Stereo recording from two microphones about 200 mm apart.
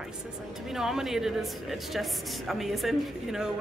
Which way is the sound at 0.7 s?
Centre (ahead or behind).